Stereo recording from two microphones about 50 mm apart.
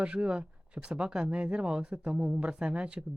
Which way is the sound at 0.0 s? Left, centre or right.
Centre.